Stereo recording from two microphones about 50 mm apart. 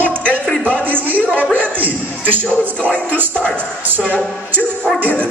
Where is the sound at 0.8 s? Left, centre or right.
Right.